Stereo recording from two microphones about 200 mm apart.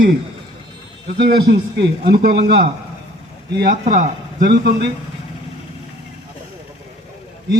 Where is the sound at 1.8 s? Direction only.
50° right (ahead or behind).